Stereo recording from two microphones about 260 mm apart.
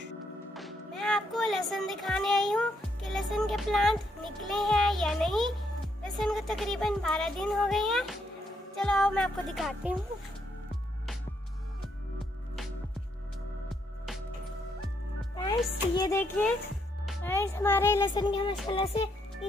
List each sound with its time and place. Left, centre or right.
0.6 s a child's voice: centre
13.7 s music: centre
15.3 s speech: centre